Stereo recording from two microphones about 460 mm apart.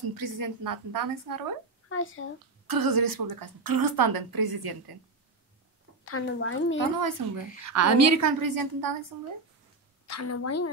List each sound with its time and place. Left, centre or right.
0.1 s a woman's voice: right
1.9 s a woman's voice: left
2.6 s a woman's voice: right
6.0 s a woman's voice: left
7.0 s a woman's voice: right
10.0 s a woman's voice: left